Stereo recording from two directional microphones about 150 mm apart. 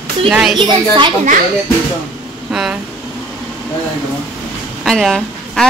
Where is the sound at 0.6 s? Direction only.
30° right (ahead or behind).